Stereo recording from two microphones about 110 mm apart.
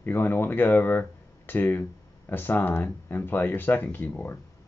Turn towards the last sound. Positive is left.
turn(degrees=15)  # may be behind; listen again after turning